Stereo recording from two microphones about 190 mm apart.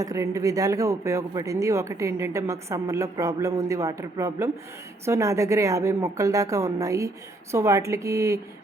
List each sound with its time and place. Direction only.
0.0 s speech: 15° right (ahead or behind)